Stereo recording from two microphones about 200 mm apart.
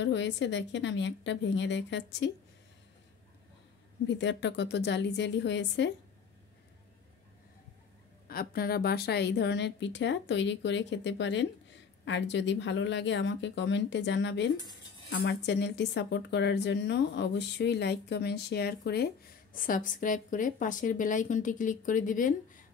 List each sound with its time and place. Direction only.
0.0 s speech: 65° left (ahead or behind)
4.1 s speech: 65° left (ahead or behind)
8.3 s speech: 45° left (ahead or behind)
19.5 s a woman's voice: 45° left (ahead or behind)